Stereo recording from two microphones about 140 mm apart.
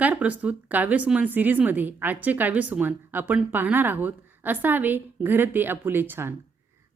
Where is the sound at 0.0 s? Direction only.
10° right (ahead or behind).